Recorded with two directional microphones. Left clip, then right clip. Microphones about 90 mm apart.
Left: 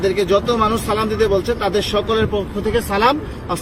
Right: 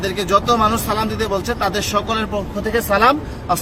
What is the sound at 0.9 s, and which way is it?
A man's voice, 55° right (ahead or behind).